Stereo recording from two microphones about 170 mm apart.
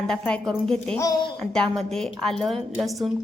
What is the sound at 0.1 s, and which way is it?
Speech, 5° left (ahead or behind).